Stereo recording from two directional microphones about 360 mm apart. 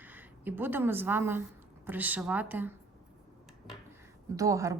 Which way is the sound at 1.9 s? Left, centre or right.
Centre.